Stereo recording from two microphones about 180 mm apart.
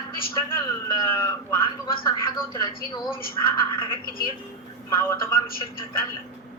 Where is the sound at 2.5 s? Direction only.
25° left (ahead or behind).